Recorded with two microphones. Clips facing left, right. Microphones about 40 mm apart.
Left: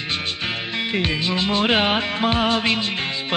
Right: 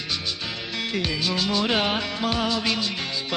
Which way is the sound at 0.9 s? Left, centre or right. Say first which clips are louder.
Left 3 dB; left.